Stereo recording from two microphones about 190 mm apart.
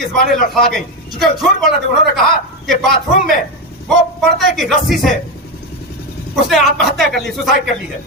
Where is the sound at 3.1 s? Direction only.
45° left (ahead or behind).